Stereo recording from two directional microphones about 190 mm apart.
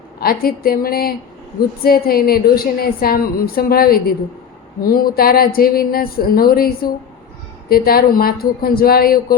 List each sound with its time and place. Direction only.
0.2 s a woman's voice: 50° left (ahead or behind)